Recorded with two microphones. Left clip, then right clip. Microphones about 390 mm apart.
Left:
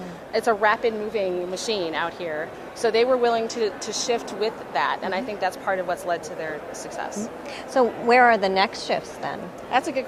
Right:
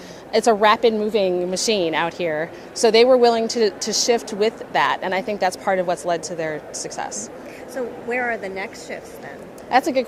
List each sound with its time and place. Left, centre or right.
0.3 s a woman's voice: right
1.2 s a woman's voice: right
7.7 s a woman's voice: left
9.6 s a woman's voice: right